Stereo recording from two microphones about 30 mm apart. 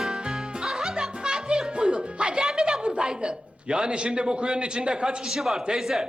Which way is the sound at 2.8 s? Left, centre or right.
Right.